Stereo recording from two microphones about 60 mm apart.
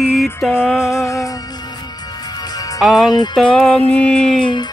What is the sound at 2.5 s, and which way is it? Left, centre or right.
Music, left.